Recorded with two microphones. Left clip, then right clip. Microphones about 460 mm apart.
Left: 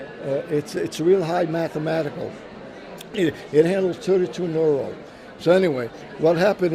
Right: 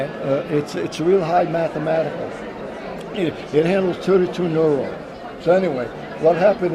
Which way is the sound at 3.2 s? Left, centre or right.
Left.